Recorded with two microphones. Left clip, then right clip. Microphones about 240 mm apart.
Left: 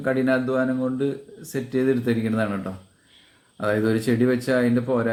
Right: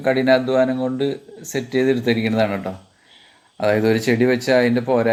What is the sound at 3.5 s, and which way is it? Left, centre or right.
Speech, centre.